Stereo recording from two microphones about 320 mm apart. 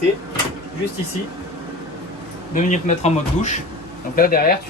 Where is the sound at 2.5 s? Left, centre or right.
Left.